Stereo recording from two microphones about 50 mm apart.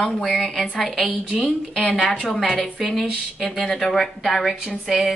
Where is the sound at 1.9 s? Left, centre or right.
Left.